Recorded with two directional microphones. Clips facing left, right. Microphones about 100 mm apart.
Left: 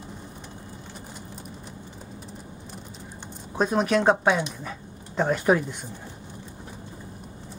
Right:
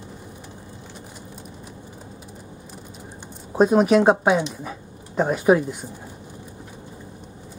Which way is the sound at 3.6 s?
15° right (ahead or behind).